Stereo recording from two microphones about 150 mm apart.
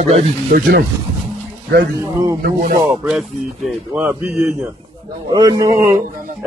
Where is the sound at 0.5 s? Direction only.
70° right (ahead or behind).